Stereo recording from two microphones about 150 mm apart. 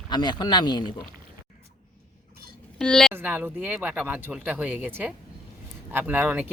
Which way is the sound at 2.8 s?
5° left (ahead or behind).